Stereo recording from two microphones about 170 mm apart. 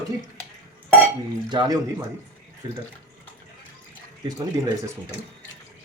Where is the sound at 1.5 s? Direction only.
25° right (ahead or behind).